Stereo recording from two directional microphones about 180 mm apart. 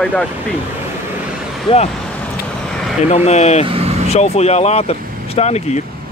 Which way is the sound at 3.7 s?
35° right (ahead or behind).